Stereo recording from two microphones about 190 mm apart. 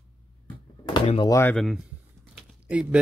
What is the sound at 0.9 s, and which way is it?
Speech, 25° left (ahead or behind).